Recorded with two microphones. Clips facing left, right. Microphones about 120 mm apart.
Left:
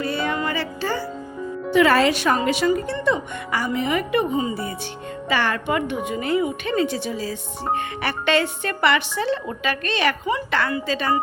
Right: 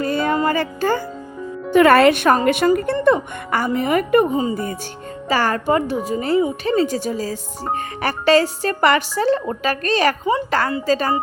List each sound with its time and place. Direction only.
0.0 s music: 45° right (ahead or behind)
1.7 s speech: 55° right (ahead or behind); by 11.1 s 40° right (ahead or behind)